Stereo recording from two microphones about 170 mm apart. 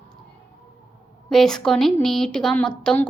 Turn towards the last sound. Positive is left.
turn(degrees=5)  # may be behind; listen again after turning